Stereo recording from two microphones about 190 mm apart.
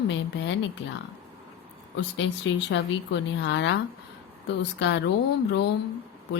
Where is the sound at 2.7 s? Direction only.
70° left (ahead or behind).